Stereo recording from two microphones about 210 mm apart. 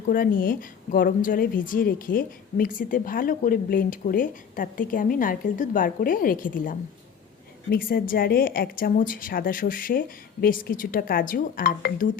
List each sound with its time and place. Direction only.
0.1 s a woman's voice: 40° left (ahead or behind)